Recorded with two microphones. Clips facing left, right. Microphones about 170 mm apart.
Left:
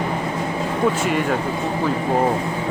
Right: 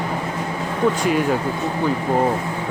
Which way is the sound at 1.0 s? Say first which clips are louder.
Right 2 dB; centre (ahead or behind).